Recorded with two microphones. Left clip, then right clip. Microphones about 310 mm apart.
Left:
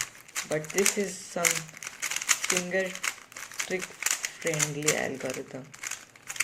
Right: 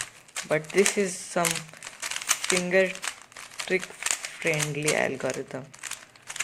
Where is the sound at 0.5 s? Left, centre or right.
Right.